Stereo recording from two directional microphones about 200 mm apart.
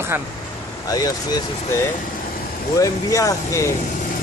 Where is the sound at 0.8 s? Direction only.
20° left (ahead or behind).